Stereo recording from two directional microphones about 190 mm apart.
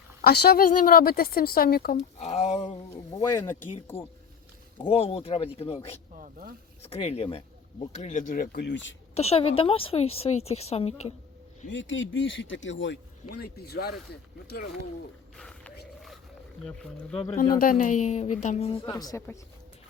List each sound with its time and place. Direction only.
0.2 s a woman's voice: 55° left (ahead or behind)
2.0 s a woman's voice: 35° left (ahead or behind)
3.2 s speech: 15° left (ahead or behind)
4.8 s a woman's voice: 30° left (ahead or behind)
6.1 s speech: 45° right (ahead or behind)
6.8 s a woman's voice: 35° left (ahead or behind)
8.5 s speech: 70° left (ahead or behind)
9.1 s a woman's voice: 35° left (ahead or behind)
11.7 s speech: 80° left; by 13.9 s 55° left (ahead or behind)
15.4 s a sound: 5° left (ahead or behind)
16.6 s speech: 5° left (ahead or behind)
17.5 s a woman's voice: 50° left (ahead or behind)
18.9 s speech: 20° left (ahead or behind)